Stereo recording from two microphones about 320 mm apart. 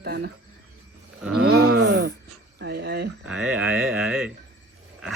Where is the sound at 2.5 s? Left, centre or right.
Right.